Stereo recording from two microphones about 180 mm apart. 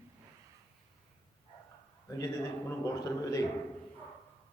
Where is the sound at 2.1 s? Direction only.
15° left (ahead or behind).